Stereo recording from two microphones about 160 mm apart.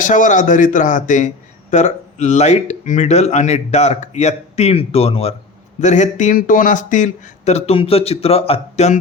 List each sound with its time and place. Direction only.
0.0 s speech: 50° left (ahead or behind)
5.8 s speech: 50° left (ahead or behind)